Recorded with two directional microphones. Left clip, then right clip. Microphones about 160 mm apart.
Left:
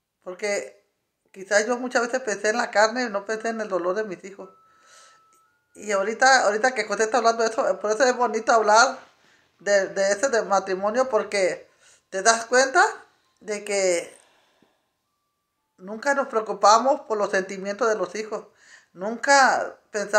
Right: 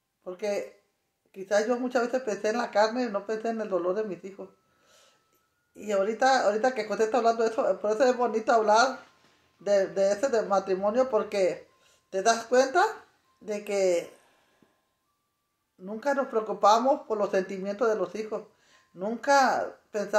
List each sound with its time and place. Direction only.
0.2 s speech: centre (ahead or behind)
15.8 s speech: centre (ahead or behind)